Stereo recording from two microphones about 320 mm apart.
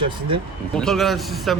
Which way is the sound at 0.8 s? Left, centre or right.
Centre.